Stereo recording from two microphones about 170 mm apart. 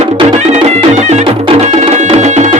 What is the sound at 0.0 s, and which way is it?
Music, 40° right (ahead or behind).